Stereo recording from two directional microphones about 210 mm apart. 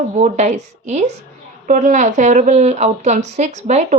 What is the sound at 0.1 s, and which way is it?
Speech, 35° right (ahead or behind).